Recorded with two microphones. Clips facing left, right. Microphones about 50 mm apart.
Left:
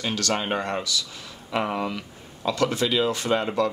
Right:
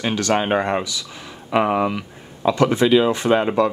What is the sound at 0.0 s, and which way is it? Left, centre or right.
Speech, right.